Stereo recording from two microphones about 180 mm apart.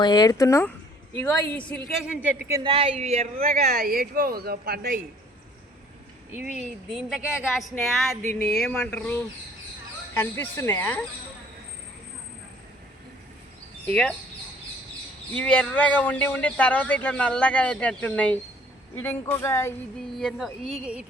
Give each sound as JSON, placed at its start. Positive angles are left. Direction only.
{"t": 0.0, "sound": "speech", "side_deg": 20}
{"t": 1.9, "sound": "speech", "side_deg": -5}
{"t": 2.6, "sound": "speech", "side_deg": -35}
{"t": 3.4, "sound": "speech", "side_deg": -55}
{"t": 6.6, "sound": "speech", "side_deg": 0}
{"t": 10.2, "sound": "speech", "side_deg": 15}
{"t": 13.8, "sound": "speech", "side_deg": 5}
{"t": 15.3, "sound": "speech", "side_deg": 5}
{"t": 20.1, "sound": "speech", "side_deg": 0}